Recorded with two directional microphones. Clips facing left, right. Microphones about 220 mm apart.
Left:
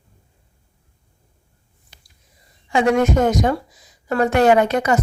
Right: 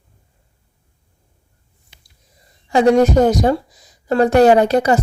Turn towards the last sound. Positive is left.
turn(degrees=-35)  # may be behind; listen again after turning